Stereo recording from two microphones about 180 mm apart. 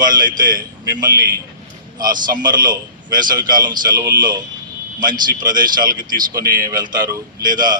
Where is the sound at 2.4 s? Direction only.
25° right (ahead or behind).